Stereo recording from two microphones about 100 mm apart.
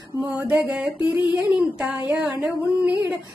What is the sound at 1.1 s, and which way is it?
Child singing, 20° right (ahead or behind).